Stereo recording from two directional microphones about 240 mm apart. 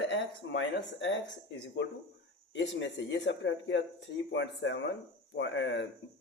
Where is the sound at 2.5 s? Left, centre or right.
Left.